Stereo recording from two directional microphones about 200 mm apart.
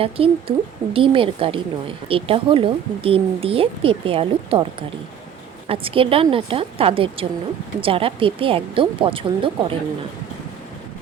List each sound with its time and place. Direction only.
0.0 s speech: 30° right (ahead or behind)